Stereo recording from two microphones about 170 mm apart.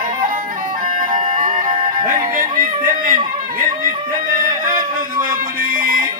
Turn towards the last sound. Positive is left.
turn(degrees=-55)  # may be behind; listen again after turning